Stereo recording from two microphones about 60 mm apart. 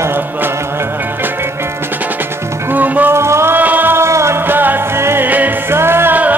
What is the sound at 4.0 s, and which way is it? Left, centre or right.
Music, right.